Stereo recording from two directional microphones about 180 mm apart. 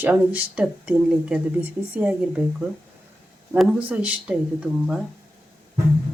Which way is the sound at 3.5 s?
5° right (ahead or behind).